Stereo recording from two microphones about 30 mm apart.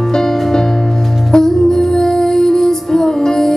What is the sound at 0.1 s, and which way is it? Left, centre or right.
Music, centre.